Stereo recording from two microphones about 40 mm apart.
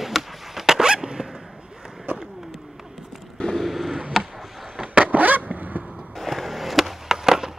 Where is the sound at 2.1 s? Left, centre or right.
Right.